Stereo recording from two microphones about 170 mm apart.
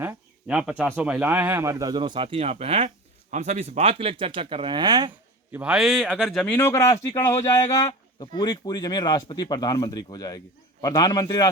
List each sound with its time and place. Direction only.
0.0 s speech: 10° right (ahead or behind); by 5.1 s 25° right (ahead or behind)
5.5 s a man's voice: 10° right (ahead or behind); by 11.5 s 20° left (ahead or behind)